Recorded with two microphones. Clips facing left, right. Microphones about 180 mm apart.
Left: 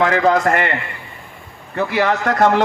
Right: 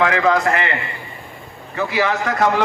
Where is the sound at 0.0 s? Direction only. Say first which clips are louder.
Left 2 dB; 35° left (ahead or behind).